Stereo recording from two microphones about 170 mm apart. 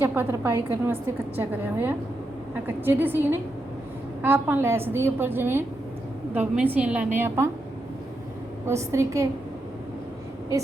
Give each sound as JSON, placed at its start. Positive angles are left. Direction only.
{"t": 0.0, "sound": "a woman's voice", "side_deg": -15}
{"t": 8.6, "sound": "a woman's voice", "side_deg": -15}